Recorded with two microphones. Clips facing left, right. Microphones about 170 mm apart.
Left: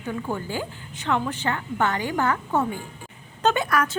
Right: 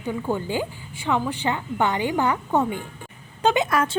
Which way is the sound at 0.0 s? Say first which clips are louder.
Right 3 dB; 15° right (ahead or behind).